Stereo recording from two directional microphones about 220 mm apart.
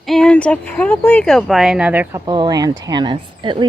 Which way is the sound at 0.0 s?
Centre (ahead or behind).